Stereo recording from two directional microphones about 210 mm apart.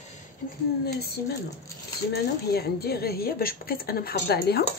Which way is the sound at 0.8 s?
50° left (ahead or behind).